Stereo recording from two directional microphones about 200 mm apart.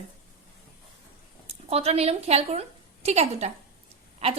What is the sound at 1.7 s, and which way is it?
A woman's voice, 30° right (ahead or behind).